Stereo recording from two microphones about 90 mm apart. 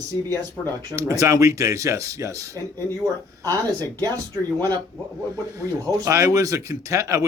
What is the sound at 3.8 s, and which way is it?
Speech, 45° right (ahead or behind).